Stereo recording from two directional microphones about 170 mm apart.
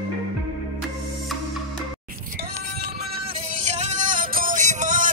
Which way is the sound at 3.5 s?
45° right (ahead or behind).